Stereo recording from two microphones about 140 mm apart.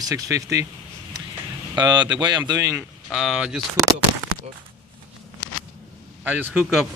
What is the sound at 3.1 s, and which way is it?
Speech, centre (ahead or behind).